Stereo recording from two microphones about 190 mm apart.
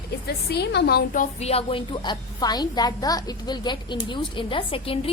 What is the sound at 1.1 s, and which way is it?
A woman's voice, 35° left (ahead or behind).